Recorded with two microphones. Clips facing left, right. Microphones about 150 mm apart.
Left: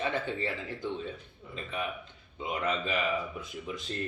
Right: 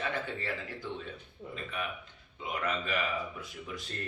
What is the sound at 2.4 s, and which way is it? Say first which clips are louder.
Speech: left 3 dB; 25° left (ahead or behind).